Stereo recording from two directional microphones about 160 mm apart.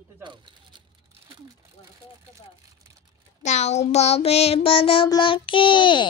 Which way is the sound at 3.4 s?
45° left (ahead or behind).